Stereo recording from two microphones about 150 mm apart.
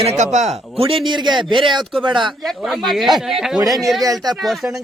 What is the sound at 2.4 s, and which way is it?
A man's voice, centre (ahead or behind).